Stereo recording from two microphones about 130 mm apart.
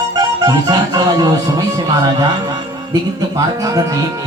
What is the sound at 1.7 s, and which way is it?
Speech, 30° right (ahead or behind).